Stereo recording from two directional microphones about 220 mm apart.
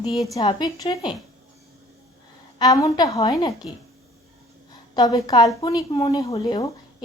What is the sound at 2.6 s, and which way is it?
Speech, 15° left (ahead or behind).